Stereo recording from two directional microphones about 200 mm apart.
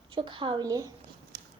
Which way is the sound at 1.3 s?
55° right (ahead or behind).